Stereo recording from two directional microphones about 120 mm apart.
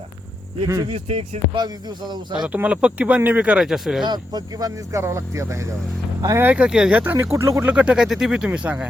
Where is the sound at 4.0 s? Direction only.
35° right (ahead or behind).